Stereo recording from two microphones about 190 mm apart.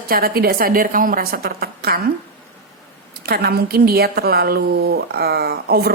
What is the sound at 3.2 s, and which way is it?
A woman's voice, 55° right (ahead or behind).